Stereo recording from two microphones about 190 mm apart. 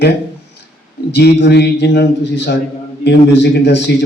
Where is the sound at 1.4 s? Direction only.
60° left (ahead or behind).